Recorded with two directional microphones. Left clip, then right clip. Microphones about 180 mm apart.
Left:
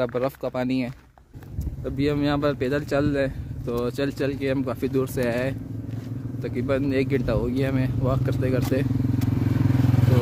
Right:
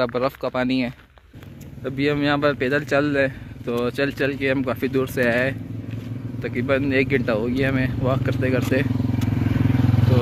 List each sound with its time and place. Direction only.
0.0 s speech: 10° left (ahead or behind)
9.4 s vehicle: 30° right (ahead or behind)